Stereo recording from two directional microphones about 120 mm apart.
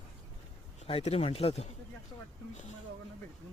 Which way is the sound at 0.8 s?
55° left (ahead or behind).